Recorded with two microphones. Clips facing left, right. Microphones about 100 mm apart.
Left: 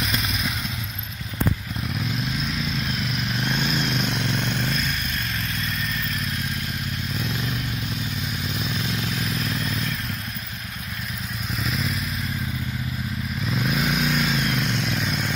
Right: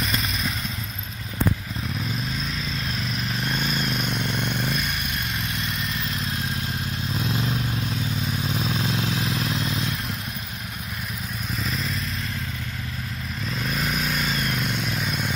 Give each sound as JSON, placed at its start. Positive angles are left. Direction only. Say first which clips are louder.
{"t": 0.0, "sound": "vehicle", "louder": "even", "side_deg": 0}
{"t": 2.4, "sound": "vehicle", "louder": "left 3 dB", "side_deg": 0}
{"t": 7.2, "sound": "vehicle", "louder": "right 4 dB", "side_deg": -30}
{"t": 8.5, "sound": "vehicle", "louder": "right 2 dB", "side_deg": -45}
{"t": 11.5, "sound": "vehicle", "louder": "left 2 dB", "side_deg": 0}
{"t": 13.4, "sound": "motorcycle", "louder": "left 3 dB", "side_deg": 0}